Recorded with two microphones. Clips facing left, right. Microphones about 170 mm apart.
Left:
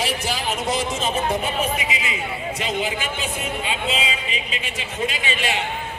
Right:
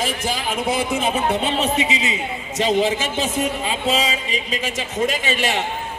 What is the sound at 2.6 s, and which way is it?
A man's voice, 35° right (ahead or behind).